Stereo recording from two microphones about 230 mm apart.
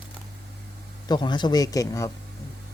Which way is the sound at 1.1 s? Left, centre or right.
Centre.